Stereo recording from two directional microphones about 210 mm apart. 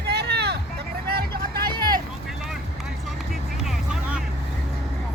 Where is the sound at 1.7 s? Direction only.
20° right (ahead or behind).